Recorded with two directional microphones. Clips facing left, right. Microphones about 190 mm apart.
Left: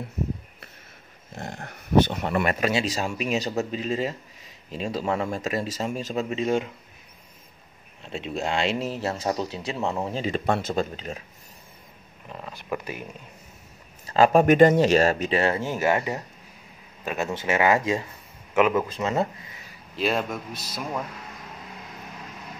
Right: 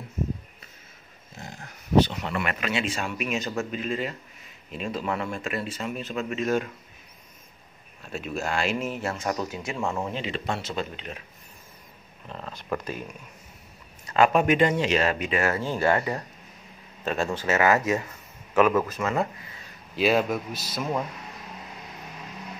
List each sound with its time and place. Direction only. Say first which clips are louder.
1.3 s speech: left 6 dB; 65° left (ahead or behind); by 6.6 s 30° left (ahead or behind)
8.0 s speech: left 2 dB; 25° left (ahead or behind)
10.1 s speech: left 5 dB; 45° left (ahead or behind)
12.3 s speech: even; 10° left (ahead or behind)
14.0 s speech: left 3 dB; 35° left (ahead or behind)
15.6 s a man's voice: even; 10° left (ahead or behind)
20.0 s a man's voice: right 3 dB; 5° right (ahead or behind)